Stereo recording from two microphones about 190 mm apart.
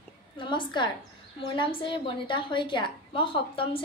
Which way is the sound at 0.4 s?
25° left (ahead or behind).